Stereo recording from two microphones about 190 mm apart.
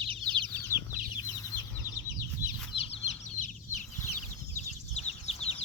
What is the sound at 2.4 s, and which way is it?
Chicken, 15° left (ahead or behind).